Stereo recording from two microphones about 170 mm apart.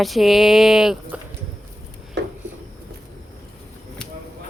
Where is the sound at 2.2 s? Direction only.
90° right.